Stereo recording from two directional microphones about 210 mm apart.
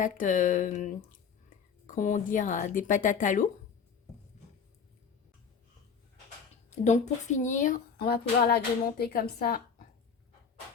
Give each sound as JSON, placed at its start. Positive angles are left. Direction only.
{"t": 0.0, "sound": "speech", "side_deg": 40}
{"t": 6.7, "sound": "speech", "side_deg": 35}